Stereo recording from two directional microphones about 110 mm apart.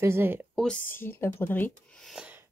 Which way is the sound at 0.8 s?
20° left (ahead or behind).